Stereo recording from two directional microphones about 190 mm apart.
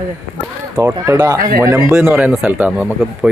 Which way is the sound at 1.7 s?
10° right (ahead or behind).